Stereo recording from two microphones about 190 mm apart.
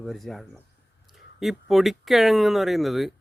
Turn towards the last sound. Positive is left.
turn(degrees=0)  # may be behind; listen again after turning